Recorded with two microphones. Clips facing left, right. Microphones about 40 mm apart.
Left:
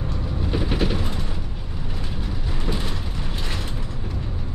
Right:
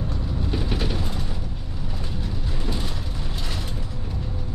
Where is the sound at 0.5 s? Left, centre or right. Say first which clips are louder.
Left 4 dB; centre.